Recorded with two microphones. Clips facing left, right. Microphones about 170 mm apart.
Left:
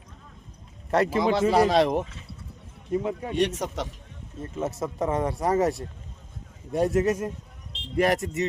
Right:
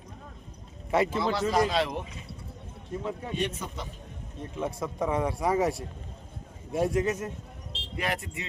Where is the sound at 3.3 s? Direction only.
75° left (ahead or behind).